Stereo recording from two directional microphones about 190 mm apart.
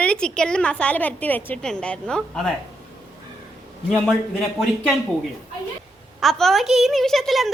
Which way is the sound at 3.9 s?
Centre (ahead or behind).